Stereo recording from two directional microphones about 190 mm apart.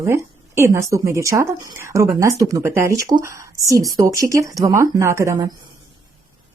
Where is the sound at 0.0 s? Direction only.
15° right (ahead or behind).